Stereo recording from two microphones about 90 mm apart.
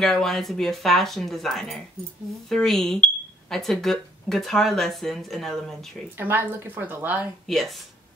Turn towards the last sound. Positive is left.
turn(degrees=0)  # may be behind; listen again after turning